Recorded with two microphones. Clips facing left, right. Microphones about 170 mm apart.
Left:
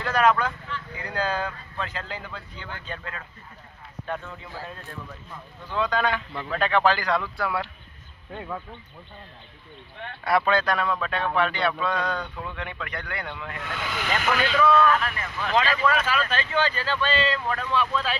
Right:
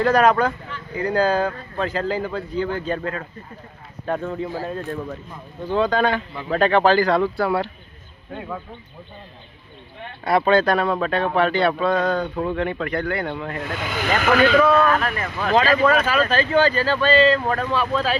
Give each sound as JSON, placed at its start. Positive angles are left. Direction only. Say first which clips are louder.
{"t": 0.0, "sound": "speech", "louder": "right 6 dB", "side_deg": -40}
{"t": 5.6, "sound": "speech", "louder": "right 6 dB", "side_deg": -30}
{"t": 10.2, "sound": "speech", "louder": "right 5 dB", "side_deg": -25}
{"t": 14.2, "sound": "speech", "louder": "right 8 dB", "side_deg": -90}
{"t": 14.6, "sound": "speech", "louder": "right 3 dB", "side_deg": -40}